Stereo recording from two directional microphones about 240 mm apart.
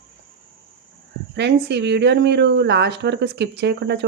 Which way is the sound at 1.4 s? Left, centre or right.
Right.